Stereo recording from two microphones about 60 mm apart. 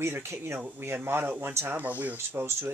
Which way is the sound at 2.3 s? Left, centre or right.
Right.